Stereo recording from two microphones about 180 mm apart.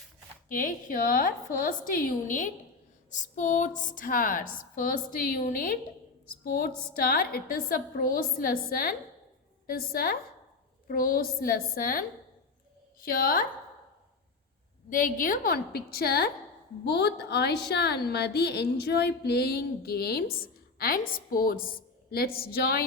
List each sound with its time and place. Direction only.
0.4 s a woman's voice: 45° left (ahead or behind)
14.8 s a woman's voice: 50° left (ahead or behind)